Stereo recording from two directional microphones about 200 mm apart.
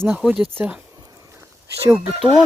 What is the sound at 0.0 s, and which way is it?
Speech, 5° right (ahead or behind).